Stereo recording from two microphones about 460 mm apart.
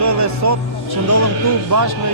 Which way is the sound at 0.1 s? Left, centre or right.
Right.